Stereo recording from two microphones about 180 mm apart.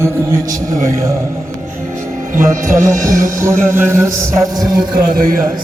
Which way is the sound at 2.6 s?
45° right (ahead or behind).